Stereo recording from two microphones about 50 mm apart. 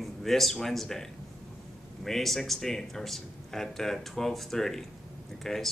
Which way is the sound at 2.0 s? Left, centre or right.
Centre.